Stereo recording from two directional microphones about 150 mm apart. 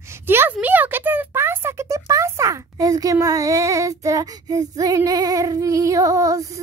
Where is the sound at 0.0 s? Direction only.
15° right (ahead or behind).